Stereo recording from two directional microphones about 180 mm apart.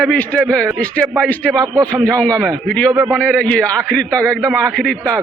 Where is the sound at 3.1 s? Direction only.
5° left (ahead or behind).